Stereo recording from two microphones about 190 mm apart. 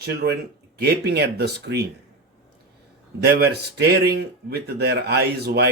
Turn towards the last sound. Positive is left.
turn(degrees=-60)  # may be behind; listen again after turning